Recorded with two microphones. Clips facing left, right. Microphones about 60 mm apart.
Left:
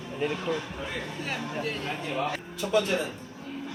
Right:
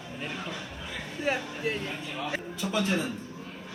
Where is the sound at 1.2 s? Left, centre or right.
Centre.